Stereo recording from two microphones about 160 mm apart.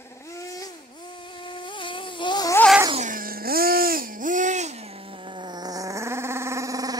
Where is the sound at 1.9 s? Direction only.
30° left (ahead or behind).